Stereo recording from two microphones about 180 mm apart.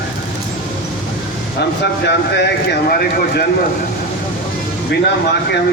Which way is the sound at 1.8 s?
70° left (ahead or behind).